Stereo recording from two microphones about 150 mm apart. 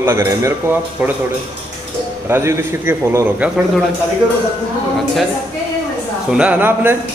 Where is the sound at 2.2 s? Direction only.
15° right (ahead or behind).